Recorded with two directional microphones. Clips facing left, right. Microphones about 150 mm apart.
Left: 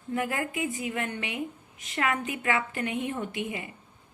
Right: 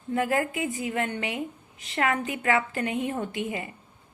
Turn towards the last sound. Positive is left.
turn(degrees=-35)  # may be behind; listen again after turning